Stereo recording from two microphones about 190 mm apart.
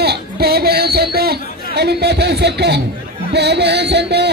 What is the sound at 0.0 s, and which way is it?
Chatter, 55° right (ahead or behind).